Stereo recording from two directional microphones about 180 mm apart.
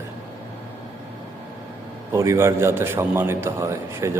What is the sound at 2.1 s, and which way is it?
A man's voice, 15° right (ahead or behind).